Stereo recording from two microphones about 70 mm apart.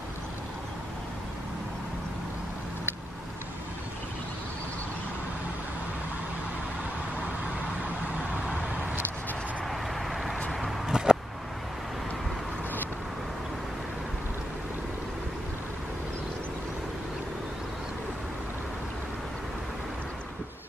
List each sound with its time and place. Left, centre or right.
8.3 s vehicle: right
9.7 s vehicle: centre